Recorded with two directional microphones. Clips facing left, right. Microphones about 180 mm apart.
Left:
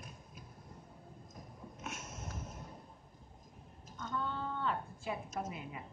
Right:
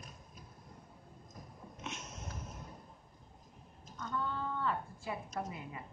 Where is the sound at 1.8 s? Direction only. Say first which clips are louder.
Right 1 dB; 5° left (ahead or behind).